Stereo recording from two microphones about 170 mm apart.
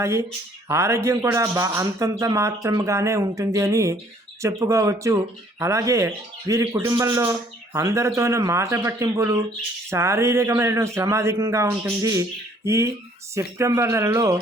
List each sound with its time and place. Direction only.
0.0 s speech: 15° right (ahead or behind)